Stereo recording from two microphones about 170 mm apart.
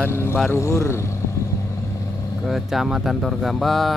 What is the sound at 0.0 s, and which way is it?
Vehicle, 15° left (ahead or behind).